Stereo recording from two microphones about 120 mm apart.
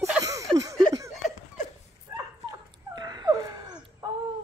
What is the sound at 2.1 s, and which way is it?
Dog, 30° right (ahead or behind).